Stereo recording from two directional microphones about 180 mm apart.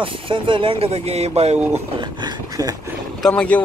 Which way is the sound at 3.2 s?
5° left (ahead or behind).